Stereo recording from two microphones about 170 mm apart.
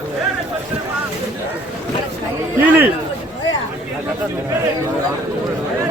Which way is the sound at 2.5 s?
15° right (ahead or behind).